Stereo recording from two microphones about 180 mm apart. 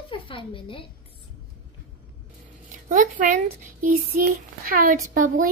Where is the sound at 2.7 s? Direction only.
45° right (ahead or behind).